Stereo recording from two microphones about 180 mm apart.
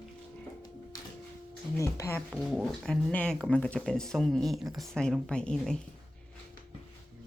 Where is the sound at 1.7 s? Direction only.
15° left (ahead or behind).